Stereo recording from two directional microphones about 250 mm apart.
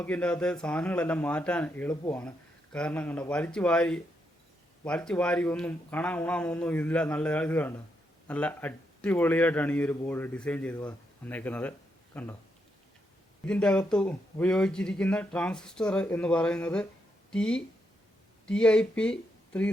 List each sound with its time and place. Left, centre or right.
0.0 s speech: centre
13.4 s speech: centre